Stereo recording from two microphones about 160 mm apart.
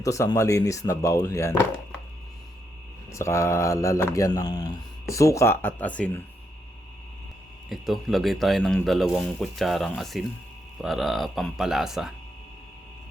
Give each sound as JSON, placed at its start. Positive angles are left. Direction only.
{"t": 0.0, "sound": "speech", "side_deg": 20}
{"t": 3.1, "sound": "speech", "side_deg": 20}
{"t": 7.7, "sound": "speech", "side_deg": 0}